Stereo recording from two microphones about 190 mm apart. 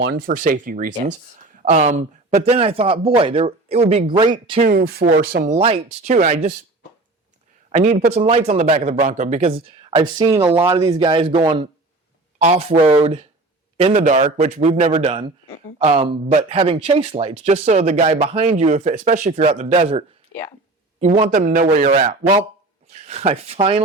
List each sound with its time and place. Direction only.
0.0 s speech: 55° right (ahead or behind)
1.9 s speech: 35° right (ahead or behind)
4.1 s speech: 15° right (ahead or behind)
4.6 s speech: 55° right (ahead or behind)
5.5 s speech: 30° right (ahead or behind)
7.7 s a man's voice: 35° right (ahead or behind)
14.0 s speech: 40° right (ahead or behind)
22.9 s speech: 35° right (ahead or behind)